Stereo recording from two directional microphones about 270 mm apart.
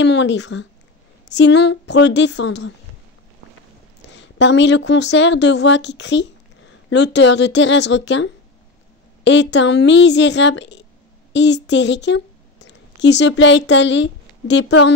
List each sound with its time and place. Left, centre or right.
0.0 s speech: left
4.4 s a woman's voice: left